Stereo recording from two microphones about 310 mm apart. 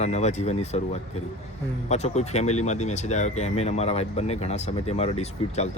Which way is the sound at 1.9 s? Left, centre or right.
Left.